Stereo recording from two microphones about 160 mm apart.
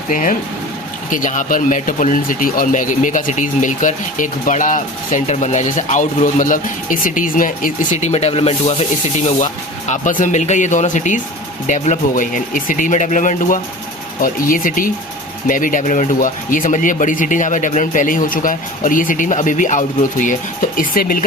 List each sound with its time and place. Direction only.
0.1 s speech: 55° left (ahead or behind)
8.0 s speech: 40° left (ahead or behind)
9.9 s speech: 55° left (ahead or behind)